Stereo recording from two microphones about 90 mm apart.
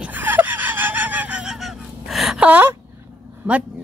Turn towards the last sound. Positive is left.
turn(degrees=-20)  # may be behind; listen again after turning